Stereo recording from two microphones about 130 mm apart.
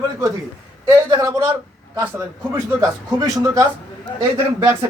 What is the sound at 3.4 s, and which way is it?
Speech, 25° right (ahead or behind).